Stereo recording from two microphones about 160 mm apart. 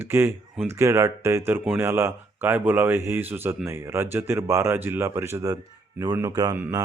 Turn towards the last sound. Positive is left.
turn(degrees=-10)  # may be behind; listen again after turning